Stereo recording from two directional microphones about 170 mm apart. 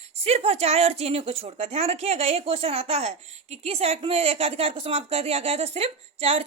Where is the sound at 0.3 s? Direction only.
35° right (ahead or behind).